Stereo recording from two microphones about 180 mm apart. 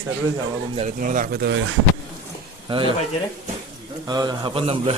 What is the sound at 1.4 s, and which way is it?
Speech, 80° right.